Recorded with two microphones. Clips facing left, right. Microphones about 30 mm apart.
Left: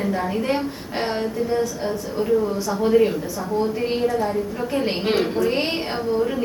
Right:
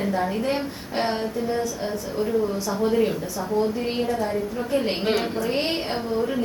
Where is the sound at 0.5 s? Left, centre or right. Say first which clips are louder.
Left 1 dB; centre.